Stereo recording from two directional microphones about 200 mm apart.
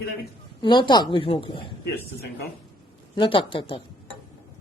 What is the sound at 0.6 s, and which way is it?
A woman's voice, 25° left (ahead or behind).